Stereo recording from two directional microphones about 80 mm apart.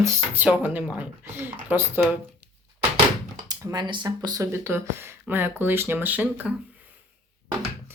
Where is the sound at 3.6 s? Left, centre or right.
Right.